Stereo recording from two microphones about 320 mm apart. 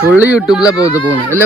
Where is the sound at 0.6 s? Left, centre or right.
Centre.